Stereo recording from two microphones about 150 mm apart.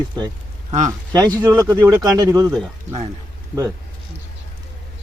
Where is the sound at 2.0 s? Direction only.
25° right (ahead or behind).